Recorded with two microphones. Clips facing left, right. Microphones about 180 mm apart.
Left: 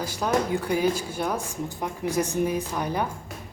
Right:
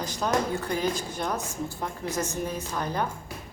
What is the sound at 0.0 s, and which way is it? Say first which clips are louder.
A woman's voice: left 2 dB; 10° left (ahead or behind).